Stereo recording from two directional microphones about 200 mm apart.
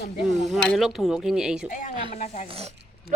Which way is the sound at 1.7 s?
40° left (ahead or behind).